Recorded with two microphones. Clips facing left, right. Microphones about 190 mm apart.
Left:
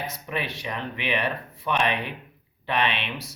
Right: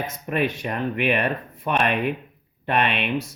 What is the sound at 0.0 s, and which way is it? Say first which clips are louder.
Speech: right 7 dB; 50° right (ahead or behind).